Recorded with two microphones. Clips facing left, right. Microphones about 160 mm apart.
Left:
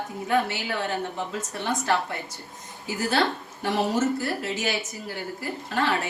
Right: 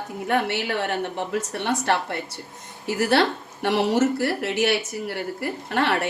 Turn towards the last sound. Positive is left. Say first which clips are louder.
# right 3 dB
turn(degrees=-65)  # may be behind; listen again after turning